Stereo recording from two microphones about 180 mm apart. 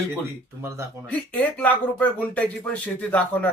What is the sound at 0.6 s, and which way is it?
Speech, 15° right (ahead or behind).